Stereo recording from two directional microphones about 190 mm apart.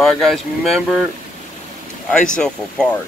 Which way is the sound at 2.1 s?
5° left (ahead or behind).